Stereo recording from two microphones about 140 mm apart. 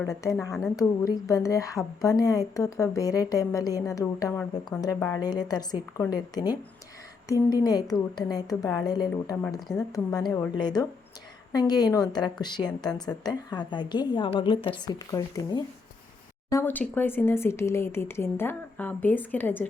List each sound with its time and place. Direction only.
0.1 s a woman's voice: 25° left (ahead or behind)
4.9 s speech: 15° left (ahead or behind)
5.2 s a woman's voice: 30° left (ahead or behind); by 19.6 s 15° left (ahead or behind)